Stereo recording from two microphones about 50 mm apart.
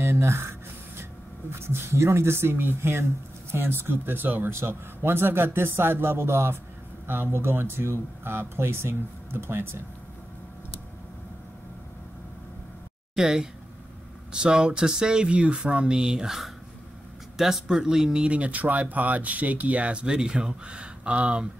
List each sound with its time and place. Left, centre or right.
0.0 s a sound: right
1.5 s speech: right
13.1 s speech: centre